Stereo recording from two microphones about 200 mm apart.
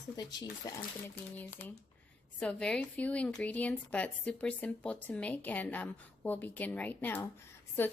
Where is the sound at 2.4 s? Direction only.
5° left (ahead or behind).